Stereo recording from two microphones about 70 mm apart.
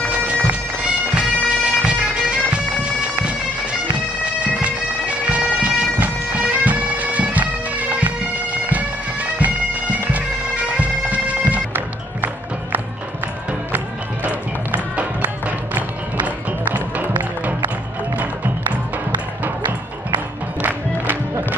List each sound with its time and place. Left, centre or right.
0.1 s bagpipes: centre
14.2 s music: right
20.6 s music: right